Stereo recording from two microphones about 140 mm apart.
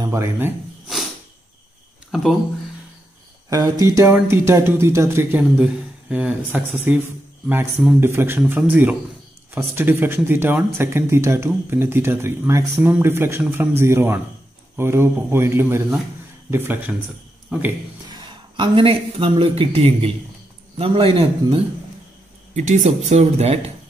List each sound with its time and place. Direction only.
0.0 s a man's voice: 20° right (ahead or behind)
2.0 s a sound: centre (ahead or behind)
3.4 s speech: 25° right (ahead or behind)
5.6 s a man's voice: 10° right (ahead or behind)
18.0 s a man's voice: 30° right (ahead or behind)
22.5 s speech: 60° right (ahead or behind)